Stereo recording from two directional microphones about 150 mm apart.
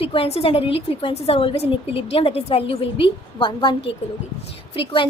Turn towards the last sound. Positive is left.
turn(degrees=35)  # may be behind; listen again after turning